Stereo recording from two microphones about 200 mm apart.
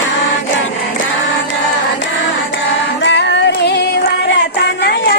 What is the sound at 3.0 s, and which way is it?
Music, 65° left (ahead or behind).